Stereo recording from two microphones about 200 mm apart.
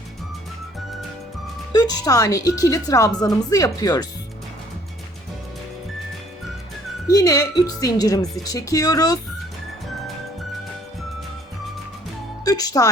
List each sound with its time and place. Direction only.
1.7 s a woman's voice: 20° left (ahead or behind)
7.1 s a woman's voice: 15° left (ahead or behind)
12.5 s music: 20° left (ahead or behind)